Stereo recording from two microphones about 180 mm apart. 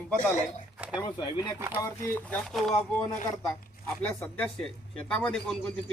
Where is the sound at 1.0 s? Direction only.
25° left (ahead or behind).